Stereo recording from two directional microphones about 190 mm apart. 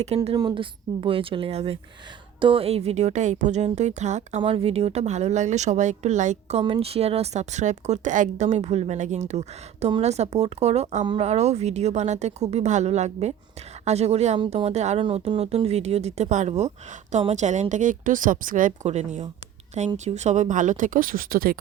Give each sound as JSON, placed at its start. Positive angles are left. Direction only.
{"t": 0.3, "sound": "a woman's voice", "side_deg": -25}
{"t": 11.0, "sound": "a woman's voice", "side_deg": -25}
{"t": 11.3, "sound": "a woman's voice", "side_deg": -35}